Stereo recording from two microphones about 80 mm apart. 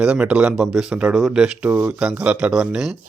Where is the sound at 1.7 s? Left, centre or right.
Right; by 2.9 s centre.